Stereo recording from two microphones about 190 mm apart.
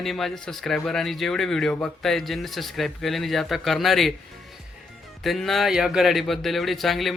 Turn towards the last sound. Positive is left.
turn(degrees=0)  # may be behind; listen again after turning